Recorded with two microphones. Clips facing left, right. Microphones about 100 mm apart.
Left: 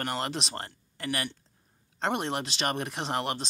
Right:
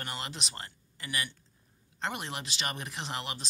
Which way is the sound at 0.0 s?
55° left (ahead or behind).